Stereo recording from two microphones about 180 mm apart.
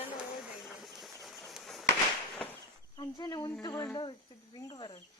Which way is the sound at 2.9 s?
25° left (ahead or behind).